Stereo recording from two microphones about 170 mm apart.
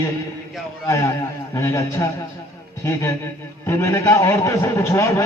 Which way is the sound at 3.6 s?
15° left (ahead or behind).